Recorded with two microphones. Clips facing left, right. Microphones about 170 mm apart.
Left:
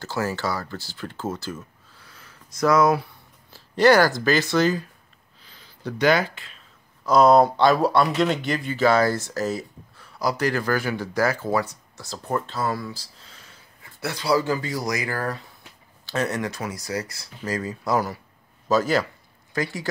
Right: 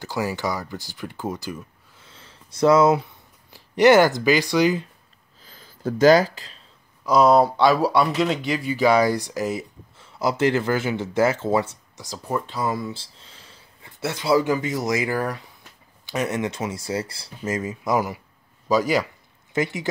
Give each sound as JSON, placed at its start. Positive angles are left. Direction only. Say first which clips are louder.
{"t": 0.0, "sound": "speech", "louder": "right 1 dB", "side_deg": -15}
{"t": 5.5, "sound": "a sound", "louder": "right 5 dB", "side_deg": -45}
{"t": 7.1, "sound": "speech", "louder": "left 1 dB", "side_deg": -5}
{"t": 12.1, "sound": "speech", "louder": "even", "side_deg": -10}